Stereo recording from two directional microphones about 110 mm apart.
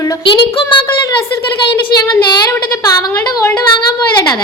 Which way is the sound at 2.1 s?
40° left (ahead or behind).